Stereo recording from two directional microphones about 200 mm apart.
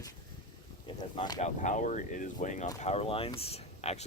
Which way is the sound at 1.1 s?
20° left (ahead or behind).